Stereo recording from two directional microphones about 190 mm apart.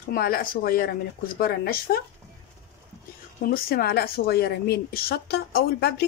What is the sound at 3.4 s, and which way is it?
A woman's voice, 50° left (ahead or behind).